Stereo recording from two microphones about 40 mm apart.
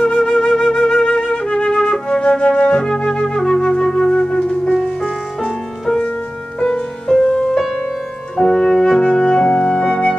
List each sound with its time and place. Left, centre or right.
0.0 s flute: centre
3.1 s flute: centre
4.7 s music: centre
7.2 s music: left